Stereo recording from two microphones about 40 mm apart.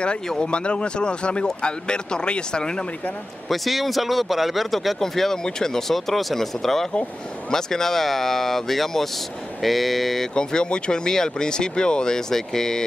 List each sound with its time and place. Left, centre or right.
0.5 s speech: left
3.4 s speech: centre
10.3 s speech: left